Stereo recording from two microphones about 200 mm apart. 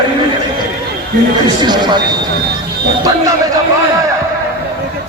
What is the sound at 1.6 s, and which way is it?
Speech, 20° right (ahead or behind).